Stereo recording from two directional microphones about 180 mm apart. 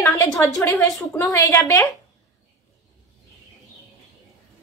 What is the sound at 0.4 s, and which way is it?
A woman's voice, 20° left (ahead or behind).